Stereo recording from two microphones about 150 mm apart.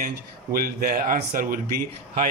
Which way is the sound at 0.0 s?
70° right (ahead or behind).